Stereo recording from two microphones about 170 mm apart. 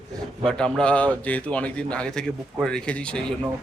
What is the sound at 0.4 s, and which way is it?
Speech, 5° left (ahead or behind).